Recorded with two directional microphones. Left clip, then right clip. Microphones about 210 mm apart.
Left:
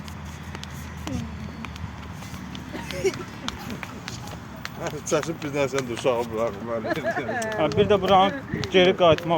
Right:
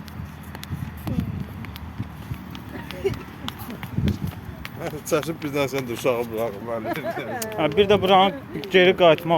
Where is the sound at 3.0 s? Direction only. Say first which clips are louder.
Left 1 dB; 50° left (ahead or behind).